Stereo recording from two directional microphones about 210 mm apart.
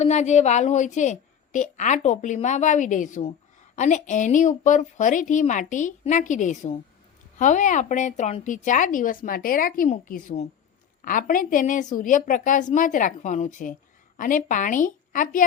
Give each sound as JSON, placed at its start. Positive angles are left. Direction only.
{"t": 0.0, "sound": "a woman's voice", "side_deg": 35}